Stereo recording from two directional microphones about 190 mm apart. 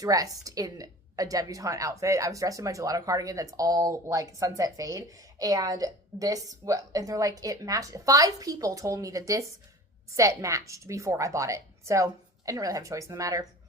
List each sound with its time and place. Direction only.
0.0 s a woman's voice: 20° right (ahead or behind)